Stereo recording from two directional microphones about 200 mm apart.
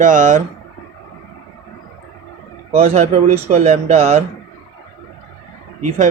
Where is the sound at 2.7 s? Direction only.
30° right (ahead or behind).